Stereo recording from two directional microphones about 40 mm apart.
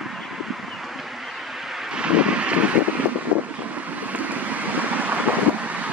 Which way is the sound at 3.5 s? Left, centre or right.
Right.